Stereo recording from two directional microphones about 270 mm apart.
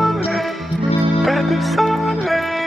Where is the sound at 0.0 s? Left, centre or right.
Centre.